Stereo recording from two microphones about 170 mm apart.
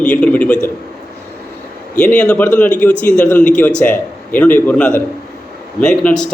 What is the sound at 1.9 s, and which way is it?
A man's voice, 5° left (ahead or behind).